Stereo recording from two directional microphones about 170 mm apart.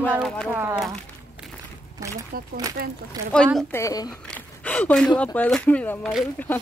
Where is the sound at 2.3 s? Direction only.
60° right (ahead or behind).